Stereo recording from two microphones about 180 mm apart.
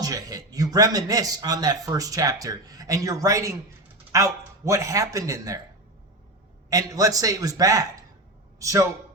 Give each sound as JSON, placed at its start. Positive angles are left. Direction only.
{"t": 0.0, "sound": "a man's voice", "side_deg": -20}
{"t": 6.7, "sound": "a man's voice", "side_deg": -20}